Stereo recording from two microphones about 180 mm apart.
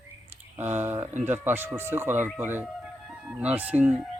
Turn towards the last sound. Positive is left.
turn(degrees=-10)  # may be behind; listen again after turning